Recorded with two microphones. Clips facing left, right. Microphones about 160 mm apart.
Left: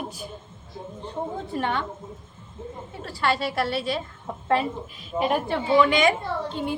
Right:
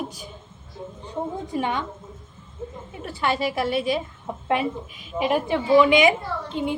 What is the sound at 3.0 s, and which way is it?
A woman's voice, 20° right (ahead or behind).